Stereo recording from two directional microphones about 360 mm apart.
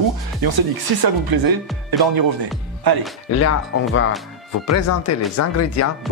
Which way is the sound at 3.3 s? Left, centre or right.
Left.